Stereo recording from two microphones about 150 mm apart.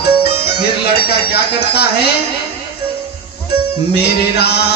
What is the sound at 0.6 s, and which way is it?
Speech, 90° left.